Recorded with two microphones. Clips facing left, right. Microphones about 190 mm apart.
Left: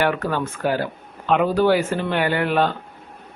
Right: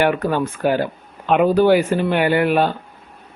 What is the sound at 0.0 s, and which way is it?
Speech, 15° right (ahead or behind).